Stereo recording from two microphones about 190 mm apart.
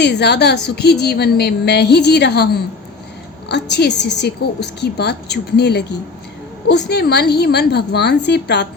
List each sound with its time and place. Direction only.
0.0 s a woman's voice: 60° left (ahead or behind)